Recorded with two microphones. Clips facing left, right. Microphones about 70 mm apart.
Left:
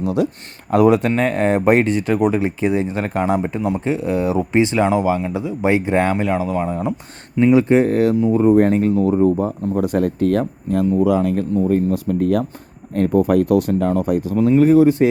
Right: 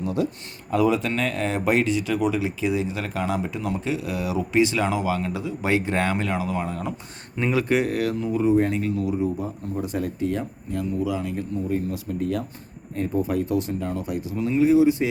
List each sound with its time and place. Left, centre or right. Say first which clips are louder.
0.0 s speech: left 6 dB; left
0.7 s speech: left 7 dB; left
1.1 s speech: left 8 dB; left
8.4 s speech: left 6 dB; left
9.7 s speech: left 9 dB; left